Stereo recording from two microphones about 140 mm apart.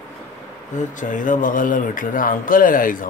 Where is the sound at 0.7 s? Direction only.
65° left (ahead or behind).